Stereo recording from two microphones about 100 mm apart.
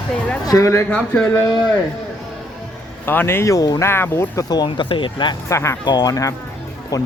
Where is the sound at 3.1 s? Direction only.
20° left (ahead or behind).